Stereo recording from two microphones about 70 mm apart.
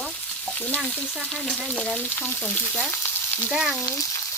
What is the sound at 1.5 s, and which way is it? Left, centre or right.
Speech, centre.